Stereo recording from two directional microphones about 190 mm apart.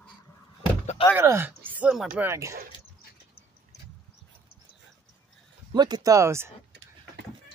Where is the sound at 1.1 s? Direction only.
15° right (ahead or behind).